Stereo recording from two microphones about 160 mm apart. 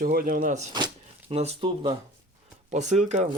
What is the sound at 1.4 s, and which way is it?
Speech, 40° right (ahead or behind).